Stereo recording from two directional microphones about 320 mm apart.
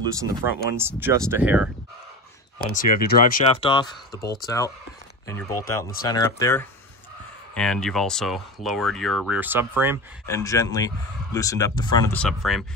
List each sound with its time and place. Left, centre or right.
0.6 s speech: centre
2.6 s speech: left
3.6 s speech: centre
10.2 s speech: centre